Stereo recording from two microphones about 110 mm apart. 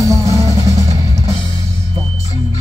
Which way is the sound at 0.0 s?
30° right (ahead or behind).